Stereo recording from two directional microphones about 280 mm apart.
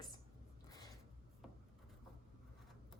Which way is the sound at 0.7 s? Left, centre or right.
Centre.